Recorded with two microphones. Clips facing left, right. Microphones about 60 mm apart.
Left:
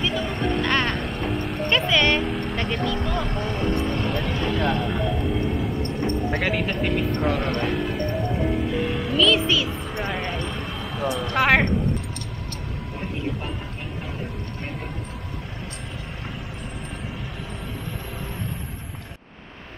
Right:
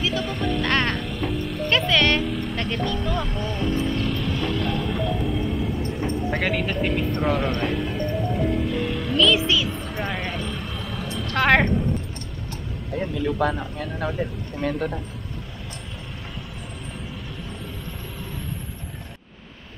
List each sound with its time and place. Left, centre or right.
0.0 s music: centre
1.3 s vehicle: left
1.7 s a sound: centre
2.5 s vehicle: centre
3.1 s speech: centre
5.9 s speech: centre
12.9 s speech: right